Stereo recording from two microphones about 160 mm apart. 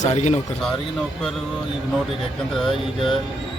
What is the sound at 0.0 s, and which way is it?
Speech, 45° left (ahead or behind).